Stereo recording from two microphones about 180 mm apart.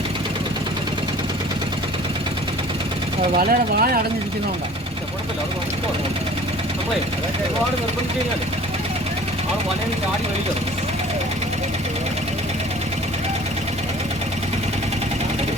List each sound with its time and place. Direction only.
3.3 s speech: 55° right (ahead or behind)